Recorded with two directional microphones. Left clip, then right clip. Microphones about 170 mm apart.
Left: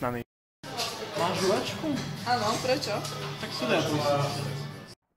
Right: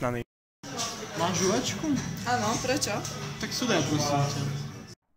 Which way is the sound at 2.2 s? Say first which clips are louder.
Left 1 dB; 50° right (ahead or behind).